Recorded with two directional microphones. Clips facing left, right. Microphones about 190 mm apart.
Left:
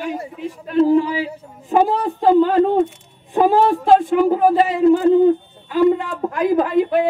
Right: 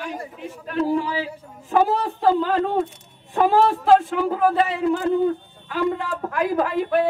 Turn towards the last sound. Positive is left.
turn(degrees=20)  # may be behind; listen again after turning